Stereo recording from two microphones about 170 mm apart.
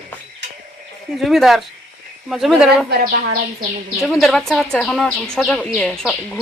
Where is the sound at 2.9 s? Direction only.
65° right (ahead or behind).